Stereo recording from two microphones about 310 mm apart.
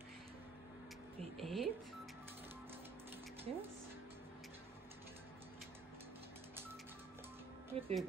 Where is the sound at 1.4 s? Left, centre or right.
Centre.